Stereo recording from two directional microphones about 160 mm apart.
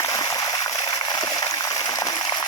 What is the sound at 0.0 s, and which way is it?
Stream, 20° left (ahead or behind).